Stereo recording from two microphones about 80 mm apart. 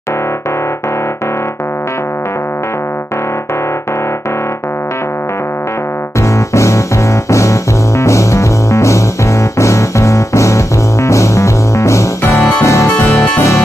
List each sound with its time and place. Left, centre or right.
6.2 s music: left
13.1 s music: centre